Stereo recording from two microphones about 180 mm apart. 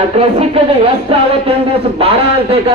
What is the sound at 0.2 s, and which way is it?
A man's voice, 35° right (ahead or behind).